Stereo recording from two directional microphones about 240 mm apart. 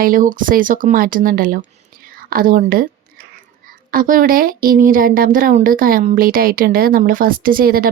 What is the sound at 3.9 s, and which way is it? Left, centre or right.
Speech, right.